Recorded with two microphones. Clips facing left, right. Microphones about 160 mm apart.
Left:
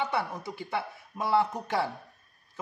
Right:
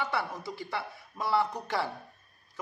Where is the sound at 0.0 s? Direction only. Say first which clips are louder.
Left 2 dB; 20° left (ahead or behind).